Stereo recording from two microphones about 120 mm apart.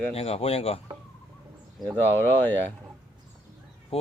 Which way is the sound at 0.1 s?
55° left (ahead or behind).